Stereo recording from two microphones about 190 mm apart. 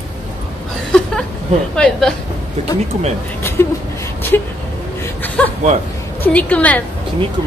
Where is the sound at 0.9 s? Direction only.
5° left (ahead or behind).